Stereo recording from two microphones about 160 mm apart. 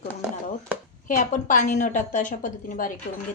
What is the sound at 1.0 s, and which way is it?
A woman's voice, 50° left (ahead or behind).